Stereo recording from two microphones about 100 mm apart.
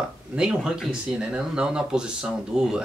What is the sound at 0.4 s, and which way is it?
Speech, 10° right (ahead or behind).